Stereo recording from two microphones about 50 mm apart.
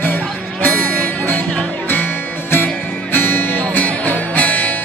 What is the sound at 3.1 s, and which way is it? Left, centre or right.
Music, left.